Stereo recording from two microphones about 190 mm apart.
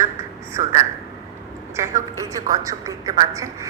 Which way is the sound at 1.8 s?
15° right (ahead or behind).